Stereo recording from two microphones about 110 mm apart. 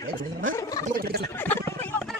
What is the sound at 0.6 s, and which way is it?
Gargling, 35° left (ahead or behind).